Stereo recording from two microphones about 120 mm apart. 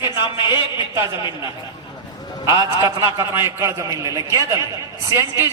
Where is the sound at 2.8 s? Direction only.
20° right (ahead or behind).